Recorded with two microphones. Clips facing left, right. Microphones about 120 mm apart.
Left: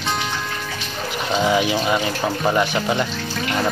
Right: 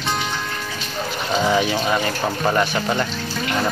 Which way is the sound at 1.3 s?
10° left (ahead or behind).